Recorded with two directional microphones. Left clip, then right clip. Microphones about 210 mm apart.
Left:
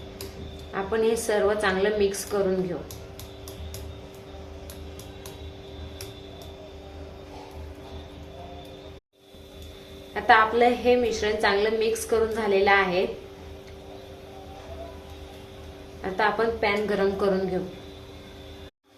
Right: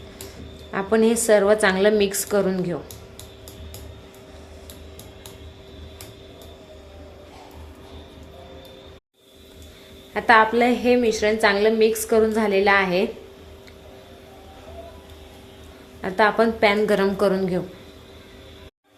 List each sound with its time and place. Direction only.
0.7 s a woman's voice: 45° right (ahead or behind)
10.2 s a woman's voice: 35° right (ahead or behind)
16.0 s a woman's voice: 40° right (ahead or behind)